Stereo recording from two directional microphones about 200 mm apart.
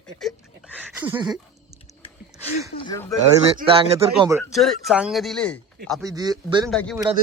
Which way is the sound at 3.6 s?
25° right (ahead or behind).